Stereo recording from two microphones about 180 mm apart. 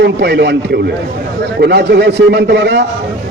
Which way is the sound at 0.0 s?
70° right (ahead or behind).